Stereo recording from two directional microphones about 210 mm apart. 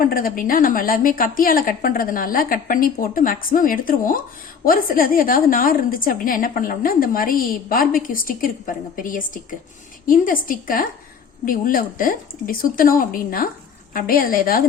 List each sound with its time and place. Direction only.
0.0 s a woman's voice: 45° left (ahead or behind)